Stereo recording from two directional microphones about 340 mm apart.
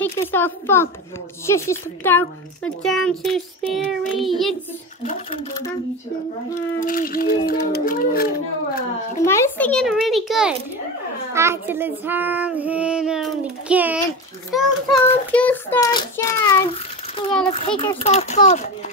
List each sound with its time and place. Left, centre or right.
0.0 s a child's voice: centre
6.5 s speech: left
9.2 s a child's voice: centre
14.5 s child singing: centre